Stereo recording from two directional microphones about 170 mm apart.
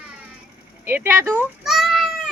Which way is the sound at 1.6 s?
Centre (ahead or behind).